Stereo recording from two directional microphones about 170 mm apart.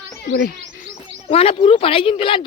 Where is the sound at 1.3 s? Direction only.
35° left (ahead or behind).